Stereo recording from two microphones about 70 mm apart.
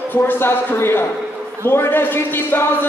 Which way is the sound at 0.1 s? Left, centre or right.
Left.